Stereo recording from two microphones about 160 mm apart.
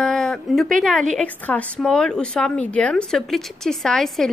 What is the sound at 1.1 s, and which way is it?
A woman's voice, 10° left (ahead or behind).